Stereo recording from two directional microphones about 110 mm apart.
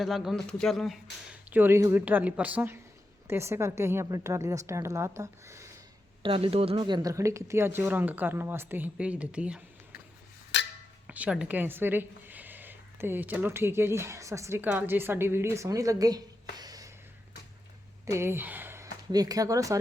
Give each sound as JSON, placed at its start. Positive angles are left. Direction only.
{"t": 0.0, "sound": "speech", "side_deg": 0}
{"t": 1.5, "sound": "a woman's voice", "side_deg": -15}
{"t": 6.2, "sound": "speech", "side_deg": -55}
{"t": 6.8, "sound": "speech", "side_deg": -45}
{"t": 7.1, "sound": "speech", "side_deg": -30}
{"t": 11.0, "sound": "speech", "side_deg": -10}
{"t": 14.6, "sound": "speech", "side_deg": -15}
{"t": 18.0, "sound": "speech", "side_deg": -25}
{"t": 19.1, "sound": "speech", "side_deg": -35}